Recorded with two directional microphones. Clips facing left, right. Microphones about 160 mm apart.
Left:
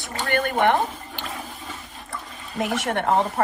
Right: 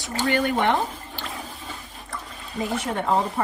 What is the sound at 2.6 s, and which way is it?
Speech, 85° left.